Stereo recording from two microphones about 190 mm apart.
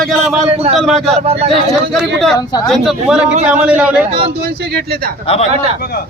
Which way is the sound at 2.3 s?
20° left (ahead or behind).